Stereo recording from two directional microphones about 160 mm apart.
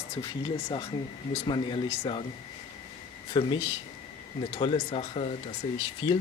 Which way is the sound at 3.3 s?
30° left (ahead or behind).